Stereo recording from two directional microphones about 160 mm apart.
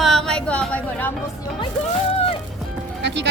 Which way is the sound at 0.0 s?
Centre (ahead or behind).